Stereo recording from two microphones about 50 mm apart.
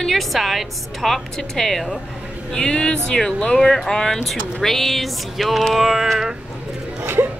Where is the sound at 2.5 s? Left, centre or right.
Centre.